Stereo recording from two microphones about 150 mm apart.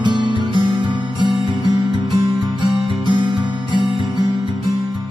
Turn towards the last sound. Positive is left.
turn(degrees=-30)  # may be behind; listen again after turning